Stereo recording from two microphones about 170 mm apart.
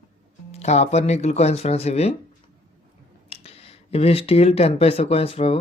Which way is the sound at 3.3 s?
35° left (ahead or behind).